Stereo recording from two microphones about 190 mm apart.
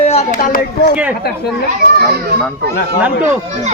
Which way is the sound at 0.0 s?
35° left (ahead or behind).